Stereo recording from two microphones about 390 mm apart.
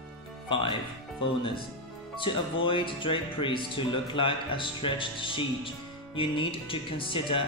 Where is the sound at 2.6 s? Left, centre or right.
Centre.